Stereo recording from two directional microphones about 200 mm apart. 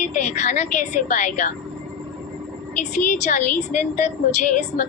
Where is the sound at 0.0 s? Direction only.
35° left (ahead or behind).